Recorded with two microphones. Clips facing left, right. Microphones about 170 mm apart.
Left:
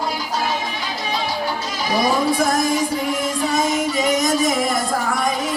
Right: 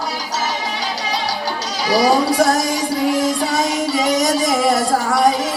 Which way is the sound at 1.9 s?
80° right.